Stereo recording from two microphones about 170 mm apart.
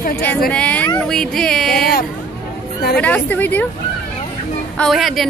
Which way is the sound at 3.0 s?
10° left (ahead or behind).